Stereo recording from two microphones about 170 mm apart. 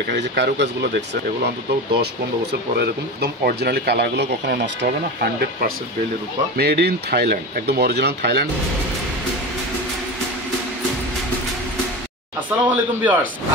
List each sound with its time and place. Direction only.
0.1 s speech: 90° right
2.7 s speech: 65° right (ahead or behind)
12.4 s speech: 10° right (ahead or behind)